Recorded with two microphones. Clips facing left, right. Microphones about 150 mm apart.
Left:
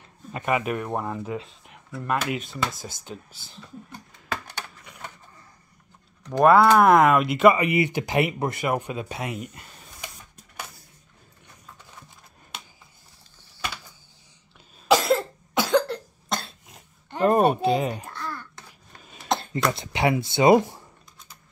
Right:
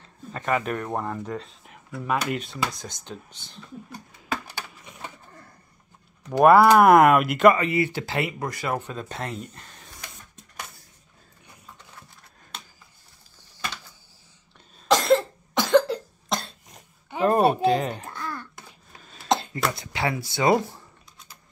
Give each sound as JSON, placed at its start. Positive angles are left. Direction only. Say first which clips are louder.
{"t": 0.3, "sound": "speech", "louder": "left 1 dB", "side_deg": 10}
{"t": 4.3, "sound": "computer keyboard", "louder": "right 1 dB", "side_deg": -10}
{"t": 6.2, "sound": "speech", "louder": "right 1 dB", "side_deg": -5}
{"t": 7.6, "sound": "speech", "louder": "left 1 dB", "side_deg": 15}
{"t": 14.9, "sound": "cough", "louder": "right 1 dB", "side_deg": 5}
{"t": 18.1, "sound": "a sound", "louder": "right 1 dB", "side_deg": -20}
{"t": 19.7, "sound": "speech", "louder": "left 4 dB", "side_deg": 25}